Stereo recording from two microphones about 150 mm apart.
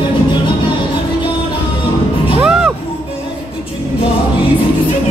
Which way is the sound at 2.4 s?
5° right (ahead or behind).